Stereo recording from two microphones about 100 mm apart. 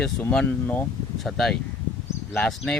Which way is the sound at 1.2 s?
Centre (ahead or behind).